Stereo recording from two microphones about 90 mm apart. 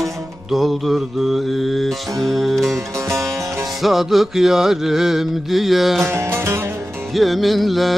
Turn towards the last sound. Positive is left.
turn(degrees=0)  # may be behind; listen again after turning